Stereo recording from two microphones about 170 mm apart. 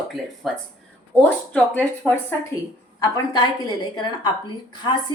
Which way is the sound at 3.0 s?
25° left (ahead or behind).